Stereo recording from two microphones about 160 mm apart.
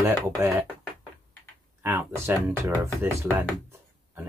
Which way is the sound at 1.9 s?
20° right (ahead or behind).